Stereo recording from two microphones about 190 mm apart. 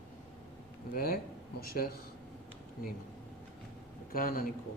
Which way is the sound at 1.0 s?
55° left (ahead or behind).